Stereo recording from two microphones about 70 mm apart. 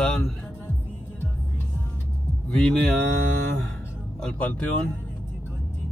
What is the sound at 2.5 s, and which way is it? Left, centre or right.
Speech, centre.